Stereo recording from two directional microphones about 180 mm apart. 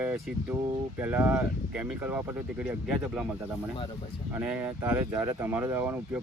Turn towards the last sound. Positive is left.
turn(degrees=-10)  # may be behind; listen again after turning